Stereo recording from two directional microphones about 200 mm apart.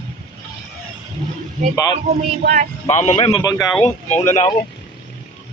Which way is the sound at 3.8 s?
35° left (ahead or behind).